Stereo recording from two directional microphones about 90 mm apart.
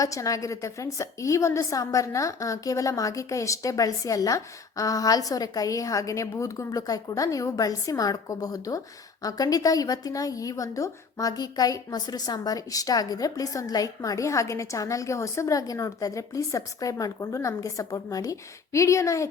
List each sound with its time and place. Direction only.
0.0 s a woman's voice: 40° left (ahead or behind)